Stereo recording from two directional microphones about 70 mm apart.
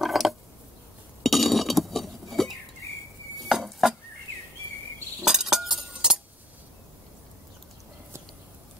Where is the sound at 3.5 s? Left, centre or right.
Centre.